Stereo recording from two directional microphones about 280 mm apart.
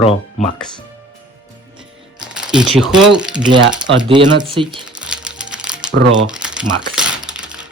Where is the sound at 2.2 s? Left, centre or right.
Centre.